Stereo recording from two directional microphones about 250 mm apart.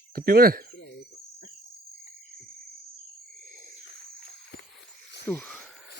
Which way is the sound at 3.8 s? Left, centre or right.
Left.